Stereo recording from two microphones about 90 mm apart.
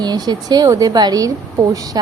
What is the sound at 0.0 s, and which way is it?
A woman's voice, 50° right (ahead or behind).